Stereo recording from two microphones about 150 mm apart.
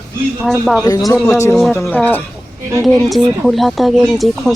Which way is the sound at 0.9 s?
25° left (ahead or behind).